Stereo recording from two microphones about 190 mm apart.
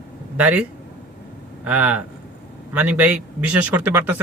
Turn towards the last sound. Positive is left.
turn(degrees=-10)  # may be behind; listen again after turning